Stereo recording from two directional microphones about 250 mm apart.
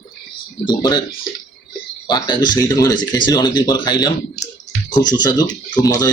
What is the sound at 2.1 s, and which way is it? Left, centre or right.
Speech, centre.